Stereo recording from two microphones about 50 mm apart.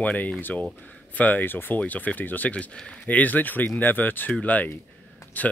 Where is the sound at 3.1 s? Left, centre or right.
Left.